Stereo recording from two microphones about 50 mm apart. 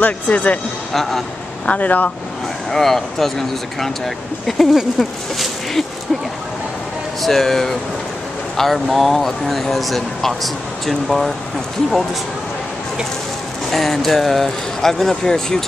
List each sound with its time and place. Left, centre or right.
0.0 s speech: left
1.7 s speech: left
2.7 s speech: centre
7.2 s speech: centre
13.7 s speech: centre